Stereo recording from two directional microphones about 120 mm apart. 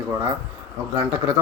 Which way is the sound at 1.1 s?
15° right (ahead or behind).